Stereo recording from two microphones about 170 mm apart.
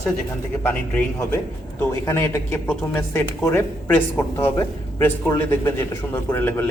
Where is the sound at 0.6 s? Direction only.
10° left (ahead or behind).